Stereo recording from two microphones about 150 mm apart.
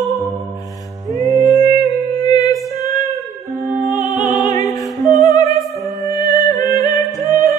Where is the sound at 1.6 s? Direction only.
25° left (ahead or behind).